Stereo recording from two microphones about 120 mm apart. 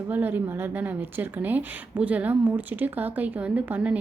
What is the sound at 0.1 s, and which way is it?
Speech, 15° right (ahead or behind).